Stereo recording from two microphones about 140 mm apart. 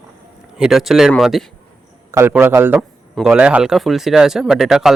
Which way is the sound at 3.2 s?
5° right (ahead or behind).